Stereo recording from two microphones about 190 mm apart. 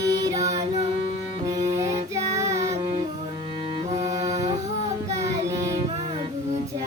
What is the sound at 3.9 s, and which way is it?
Music, 35° right (ahead or behind).